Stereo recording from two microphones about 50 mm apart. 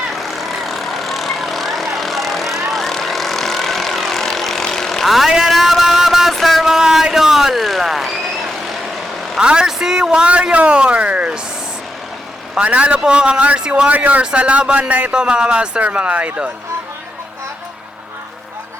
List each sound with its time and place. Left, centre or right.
0.1 s vehicle: centre
5.0 s speech: centre
5.4 s music: centre
6.3 s a sound: centre
9.4 s a woman's voice: centre
12.5 s a man's voice: right
13.9 s speech: right
15.1 s speech: centre